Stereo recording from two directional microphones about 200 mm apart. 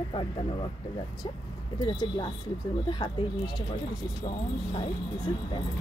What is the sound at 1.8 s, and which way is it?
Speech, 20° left (ahead or behind).